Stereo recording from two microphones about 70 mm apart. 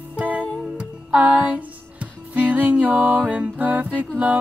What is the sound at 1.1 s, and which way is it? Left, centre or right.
Music, right.